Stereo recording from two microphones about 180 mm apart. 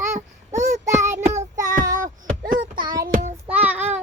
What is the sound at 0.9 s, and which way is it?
Child singing, 15° right (ahead or behind).